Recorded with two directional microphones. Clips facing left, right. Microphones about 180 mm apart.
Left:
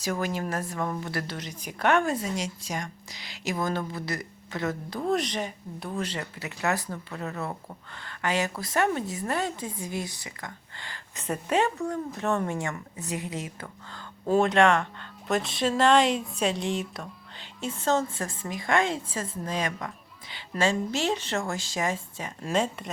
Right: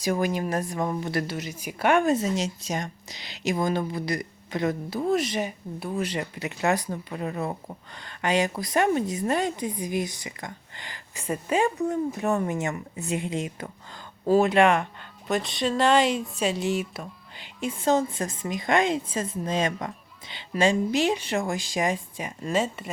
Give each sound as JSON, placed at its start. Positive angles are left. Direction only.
{"t": 0.0, "sound": "a woman's voice", "side_deg": -15}
{"t": 2.1, "sound": "a woman's voice", "side_deg": -25}
{"t": 15.3, "sound": "a woman's voice", "side_deg": 0}
{"t": 22.4, "sound": "speech", "side_deg": -5}